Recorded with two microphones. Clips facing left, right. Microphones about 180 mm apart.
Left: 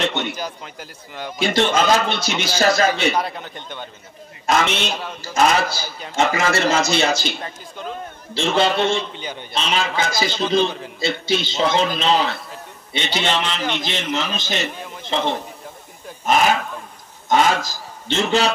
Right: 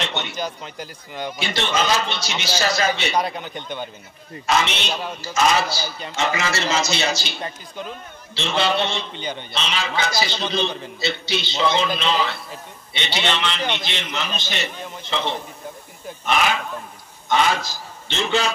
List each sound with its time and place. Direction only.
0.3 s speech: 5° left (ahead or behind)
1.4 s a man's voice: 45° left (ahead or behind)
3.2 s speech: centre (ahead or behind)
4.5 s a man's voice: 50° left (ahead or behind)
8.4 s a man's voice: 45° left (ahead or behind)
9.1 s a man's voice: 5° left (ahead or behind)
9.5 s a man's voice: 45° left (ahead or behind)